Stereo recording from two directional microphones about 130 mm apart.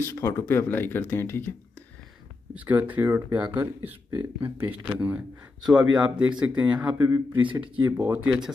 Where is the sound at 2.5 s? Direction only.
10° right (ahead or behind).